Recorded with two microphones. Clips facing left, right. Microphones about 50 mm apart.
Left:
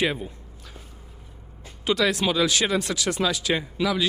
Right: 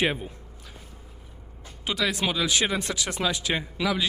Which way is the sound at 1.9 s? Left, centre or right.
Centre.